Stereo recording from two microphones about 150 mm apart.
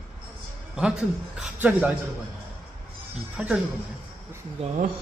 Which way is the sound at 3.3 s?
5° right (ahead or behind).